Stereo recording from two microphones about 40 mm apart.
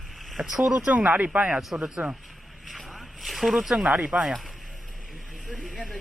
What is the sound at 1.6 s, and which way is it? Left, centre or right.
Speech, centre.